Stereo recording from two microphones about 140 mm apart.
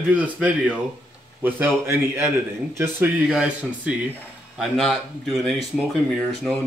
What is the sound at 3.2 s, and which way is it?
Speech, 5° right (ahead or behind).